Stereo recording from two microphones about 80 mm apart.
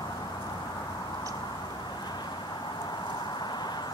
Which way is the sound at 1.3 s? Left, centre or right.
Left.